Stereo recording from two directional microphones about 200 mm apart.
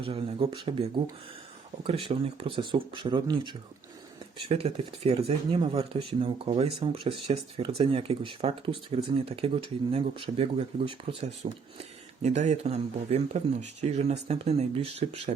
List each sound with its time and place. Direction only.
0.0 s speech: 25° right (ahead or behind)